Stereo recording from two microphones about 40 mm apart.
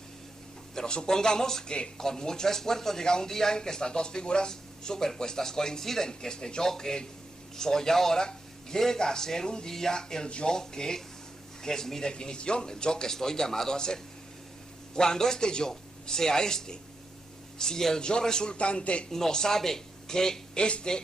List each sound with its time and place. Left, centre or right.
0.7 s a man's voice: centre
19.0 s a man's voice: centre